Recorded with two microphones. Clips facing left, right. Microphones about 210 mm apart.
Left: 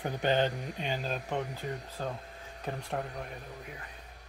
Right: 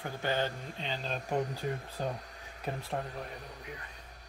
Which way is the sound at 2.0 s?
15° right (ahead or behind).